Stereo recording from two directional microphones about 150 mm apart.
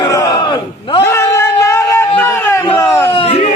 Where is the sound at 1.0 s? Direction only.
20° left (ahead or behind).